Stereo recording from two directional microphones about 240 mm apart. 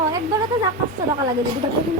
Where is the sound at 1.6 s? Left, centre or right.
Right.